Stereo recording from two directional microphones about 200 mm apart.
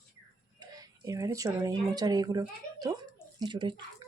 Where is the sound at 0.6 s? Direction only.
15° right (ahead or behind).